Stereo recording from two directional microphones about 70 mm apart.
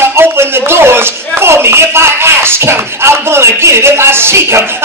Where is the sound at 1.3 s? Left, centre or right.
Right.